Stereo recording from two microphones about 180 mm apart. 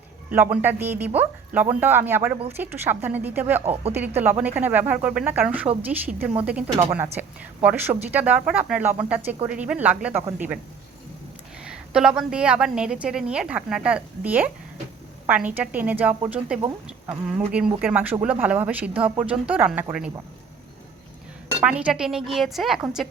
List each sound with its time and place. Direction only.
0.3 s speech: 10° right (ahead or behind)
11.6 s a woman's voice: 5° right (ahead or behind)
21.6 s a woman's voice: 5° right (ahead or behind)